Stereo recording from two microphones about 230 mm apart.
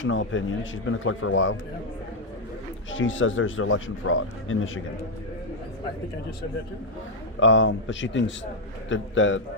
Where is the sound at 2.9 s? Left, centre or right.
Left.